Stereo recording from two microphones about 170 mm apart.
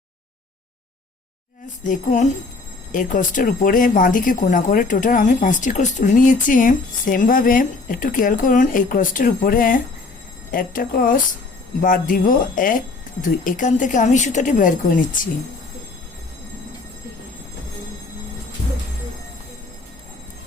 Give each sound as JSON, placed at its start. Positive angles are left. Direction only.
{"t": 1.8, "sound": "speech", "side_deg": 50}